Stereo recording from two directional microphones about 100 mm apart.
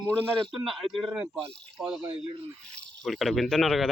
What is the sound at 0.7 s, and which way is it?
Speech, centre (ahead or behind).